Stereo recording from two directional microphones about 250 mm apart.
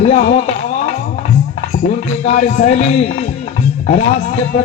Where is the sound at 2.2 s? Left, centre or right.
Left.